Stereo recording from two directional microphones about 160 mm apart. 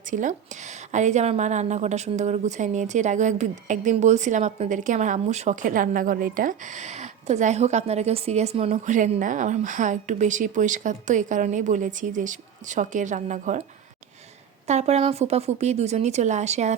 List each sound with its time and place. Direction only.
0.1 s a woman's voice: 50° right (ahead or behind)
14.7 s a woman's voice: 45° right (ahead or behind)